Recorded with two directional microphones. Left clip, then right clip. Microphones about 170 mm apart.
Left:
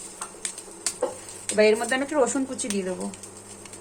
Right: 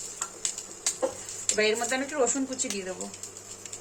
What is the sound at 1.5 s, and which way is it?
Speech, 25° left (ahead or behind).